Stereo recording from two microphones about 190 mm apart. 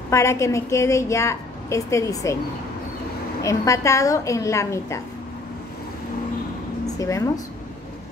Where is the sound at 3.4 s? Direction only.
15° left (ahead or behind).